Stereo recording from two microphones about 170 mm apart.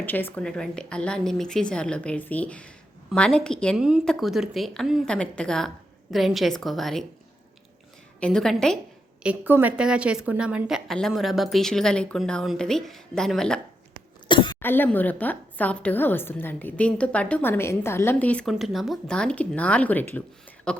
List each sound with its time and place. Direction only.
0.0 s a woman's voice: 10° left (ahead or behind)
8.2 s a woman's voice: 5° left (ahead or behind)
9.2 s a woman's voice: 10° right (ahead or behind)
14.3 s cough: 25° left (ahead or behind)
14.6 s a woman's voice: 10° left (ahead or behind)